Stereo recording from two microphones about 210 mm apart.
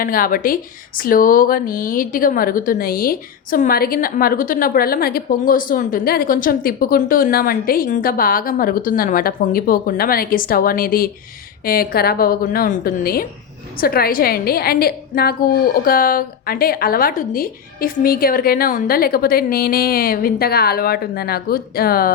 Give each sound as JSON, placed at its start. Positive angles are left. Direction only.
{"t": 0.0, "sound": "speech", "side_deg": 40}